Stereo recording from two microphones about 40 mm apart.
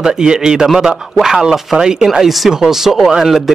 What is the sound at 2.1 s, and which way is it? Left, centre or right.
Speech, centre.